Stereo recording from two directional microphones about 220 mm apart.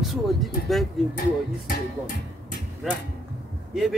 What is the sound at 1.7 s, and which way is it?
Speech, 40° left (ahead or behind).